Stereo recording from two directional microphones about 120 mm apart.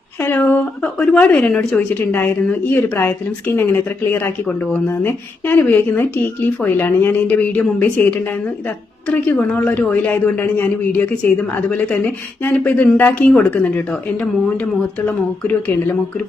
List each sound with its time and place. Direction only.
0.2 s speech: 15° left (ahead or behind)